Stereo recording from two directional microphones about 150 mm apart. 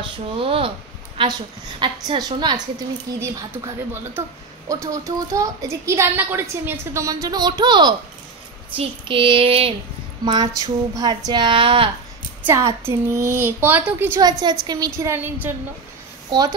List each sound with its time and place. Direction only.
0.0 s a woman's voice: 35° right (ahead or behind)
3.2 s a woman's voice: 15° right (ahead or behind)
8.7 s child singing: 35° right (ahead or behind)
10.2 s a woman's voice: 30° right (ahead or behind)
12.4 s a woman's voice: 20° right (ahead or behind)
14.2 s a woman's voice: 25° right (ahead or behind)
16.3 s speech: 25° right (ahead or behind)